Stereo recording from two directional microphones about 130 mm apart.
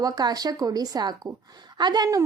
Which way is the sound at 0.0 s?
30° right (ahead or behind).